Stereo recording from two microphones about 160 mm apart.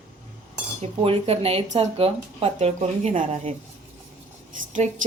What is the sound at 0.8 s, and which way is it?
Speech, 40° right (ahead or behind).